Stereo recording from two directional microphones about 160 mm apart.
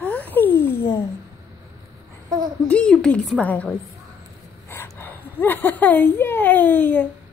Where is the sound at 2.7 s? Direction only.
5° left (ahead or behind).